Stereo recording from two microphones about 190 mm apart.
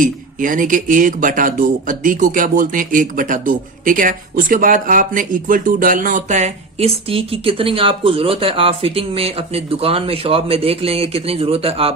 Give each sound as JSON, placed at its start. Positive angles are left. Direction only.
{"t": 0.0, "sound": "speech", "side_deg": -45}